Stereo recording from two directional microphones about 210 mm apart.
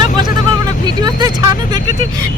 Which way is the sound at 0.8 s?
20° right (ahead or behind).